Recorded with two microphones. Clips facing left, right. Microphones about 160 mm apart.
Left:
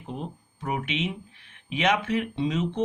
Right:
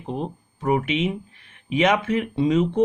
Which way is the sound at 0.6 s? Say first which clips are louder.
Right 8 dB; 50° right (ahead or behind).